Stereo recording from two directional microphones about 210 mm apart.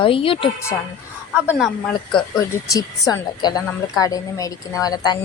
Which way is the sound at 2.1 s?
20° left (ahead or behind).